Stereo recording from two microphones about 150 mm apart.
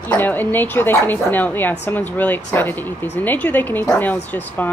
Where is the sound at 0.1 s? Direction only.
10° left (ahead or behind).